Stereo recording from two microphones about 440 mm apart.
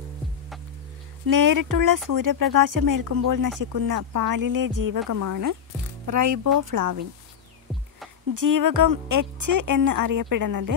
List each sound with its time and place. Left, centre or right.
1.2 s a woman's voice: right
8.4 s a woman's voice: right